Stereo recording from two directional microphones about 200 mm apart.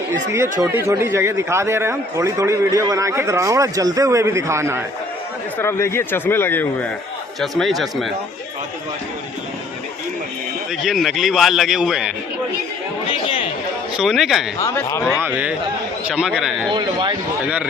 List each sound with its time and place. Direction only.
0.7 s a man's voice: 15° right (ahead or behind)
5.5 s a man's voice: 15° left (ahead or behind)
10.7 s a man's voice: centre (ahead or behind)
13.1 s chatter: 25° left (ahead or behind)
13.9 s a man's voice: centre (ahead or behind)
14.6 s speech: 15° left (ahead or behind)
15.2 s a man's voice: 5° right (ahead or behind)
16.7 s speech: 25° right (ahead or behind)
17.4 s a man's voice: 5° right (ahead or behind)